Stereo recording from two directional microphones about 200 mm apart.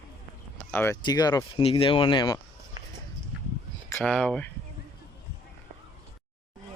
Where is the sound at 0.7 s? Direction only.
10° left (ahead or behind).